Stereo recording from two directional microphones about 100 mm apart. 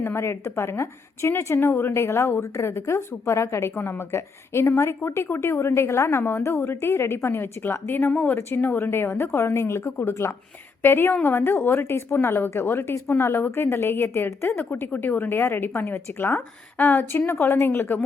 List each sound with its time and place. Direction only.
0.0 s a woman's voice: 25° left (ahead or behind)